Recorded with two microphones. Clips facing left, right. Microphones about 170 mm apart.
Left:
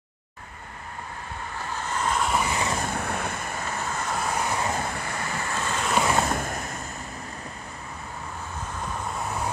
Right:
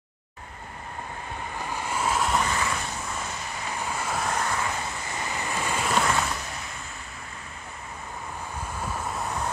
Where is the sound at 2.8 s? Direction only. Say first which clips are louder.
Left 5 dB; 60° left (ahead or behind).